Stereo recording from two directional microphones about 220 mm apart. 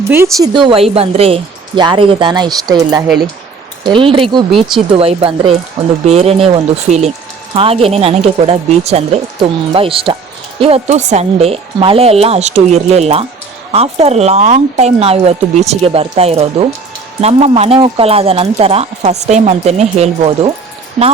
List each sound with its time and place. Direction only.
0.1 s speech: 15° right (ahead or behind)